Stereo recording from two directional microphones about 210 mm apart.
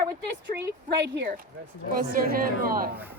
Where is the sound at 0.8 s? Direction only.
50° right (ahead or behind).